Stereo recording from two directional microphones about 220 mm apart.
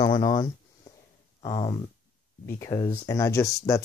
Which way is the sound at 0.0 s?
20° left (ahead or behind).